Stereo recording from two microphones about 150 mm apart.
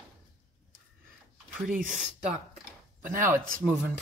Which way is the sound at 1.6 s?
60° right (ahead or behind).